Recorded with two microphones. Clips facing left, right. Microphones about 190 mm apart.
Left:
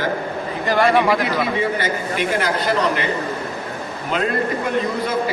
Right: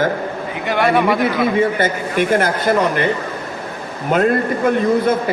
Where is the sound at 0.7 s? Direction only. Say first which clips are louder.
Right 1 dB; centre (ahead or behind).